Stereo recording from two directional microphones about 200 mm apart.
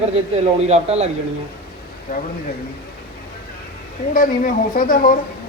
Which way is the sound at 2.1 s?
50° left (ahead or behind).